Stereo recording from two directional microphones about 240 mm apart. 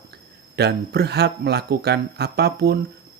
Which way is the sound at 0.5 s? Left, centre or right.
Right.